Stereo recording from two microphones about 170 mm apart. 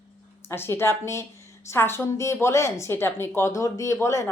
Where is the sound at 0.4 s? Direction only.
15° left (ahead or behind).